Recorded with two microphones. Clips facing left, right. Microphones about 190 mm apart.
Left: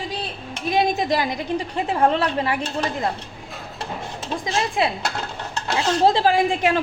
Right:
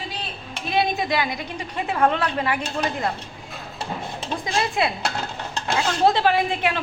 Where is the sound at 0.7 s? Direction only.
40° left (ahead or behind).